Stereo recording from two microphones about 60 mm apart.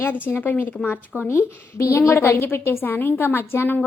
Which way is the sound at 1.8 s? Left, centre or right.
Left.